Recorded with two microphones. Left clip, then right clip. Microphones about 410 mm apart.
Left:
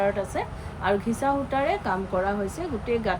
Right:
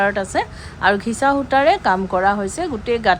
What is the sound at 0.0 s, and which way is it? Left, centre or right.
A woman's voice, centre.